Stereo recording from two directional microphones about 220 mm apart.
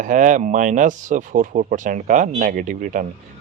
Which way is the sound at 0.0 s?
35° right (ahead or behind).